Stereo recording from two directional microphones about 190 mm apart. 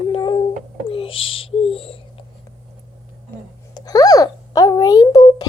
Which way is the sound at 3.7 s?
20° left (ahead or behind).